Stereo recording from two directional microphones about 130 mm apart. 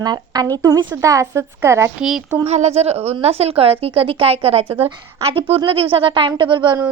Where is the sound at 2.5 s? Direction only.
55° right (ahead or behind); by 6.7 s 40° right (ahead or behind).